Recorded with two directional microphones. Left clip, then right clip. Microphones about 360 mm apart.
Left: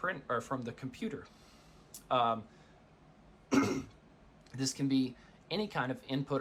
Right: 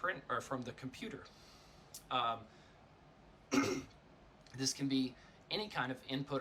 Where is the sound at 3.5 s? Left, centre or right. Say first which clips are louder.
Left 4 dB; centre.